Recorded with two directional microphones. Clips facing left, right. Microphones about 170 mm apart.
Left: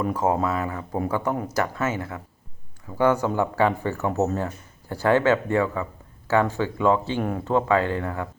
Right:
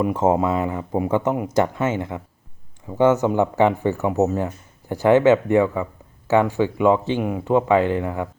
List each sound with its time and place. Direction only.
0.0 s speech: 25° right (ahead or behind)